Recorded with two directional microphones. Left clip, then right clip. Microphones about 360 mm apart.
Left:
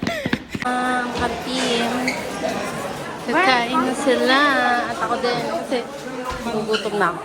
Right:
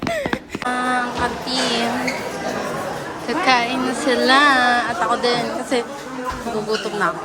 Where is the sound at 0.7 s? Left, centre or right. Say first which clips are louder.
Right 1 dB; centre.